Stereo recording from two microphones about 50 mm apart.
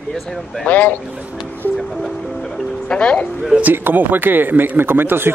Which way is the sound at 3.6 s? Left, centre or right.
Right.